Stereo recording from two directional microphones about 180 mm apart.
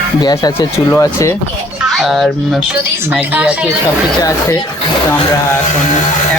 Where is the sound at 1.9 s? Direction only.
Centre (ahead or behind).